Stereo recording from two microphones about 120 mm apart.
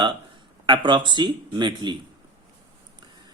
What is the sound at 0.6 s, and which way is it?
A man's voice, 40° right (ahead or behind).